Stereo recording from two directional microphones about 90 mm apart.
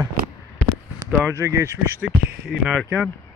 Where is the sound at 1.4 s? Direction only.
35° right (ahead or behind).